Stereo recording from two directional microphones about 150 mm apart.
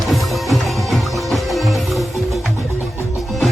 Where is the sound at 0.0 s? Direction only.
Centre (ahead or behind).